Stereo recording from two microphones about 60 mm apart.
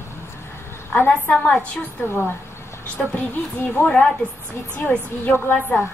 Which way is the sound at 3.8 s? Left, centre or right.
Left.